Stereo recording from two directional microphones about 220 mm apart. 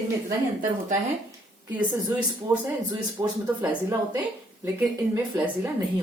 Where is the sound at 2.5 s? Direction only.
10° right (ahead or behind).